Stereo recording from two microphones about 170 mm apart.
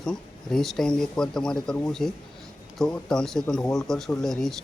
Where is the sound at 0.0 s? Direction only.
5° left (ahead or behind).